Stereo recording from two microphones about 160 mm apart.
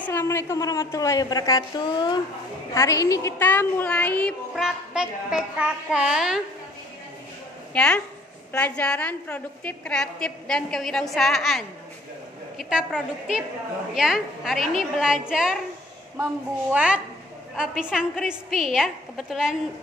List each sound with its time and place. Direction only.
0.0 s a woman's voice: 15° left (ahead or behind); by 6.4 s 5° right (ahead or behind)
7.7 s a woman's voice: 5° left (ahead or behind)
16.7 s a woman's voice: 5° right (ahead or behind)